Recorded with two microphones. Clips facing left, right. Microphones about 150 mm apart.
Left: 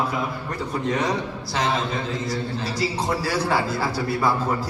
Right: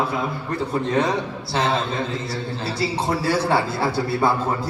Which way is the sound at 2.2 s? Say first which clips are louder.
Left 1 dB; 30° right (ahead or behind).